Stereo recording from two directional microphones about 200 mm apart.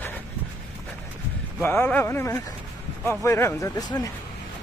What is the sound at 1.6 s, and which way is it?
A man's voice, 10° left (ahead or behind).